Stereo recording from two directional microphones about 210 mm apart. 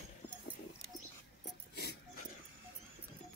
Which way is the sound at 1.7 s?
55° left (ahead or behind).